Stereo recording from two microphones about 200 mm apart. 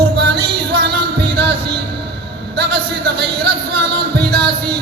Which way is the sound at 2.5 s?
55° right (ahead or behind).